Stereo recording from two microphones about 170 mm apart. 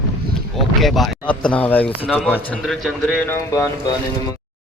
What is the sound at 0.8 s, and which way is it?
Speech, centre (ahead or behind).